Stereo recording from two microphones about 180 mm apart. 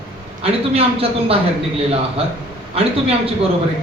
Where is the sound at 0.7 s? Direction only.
30° right (ahead or behind).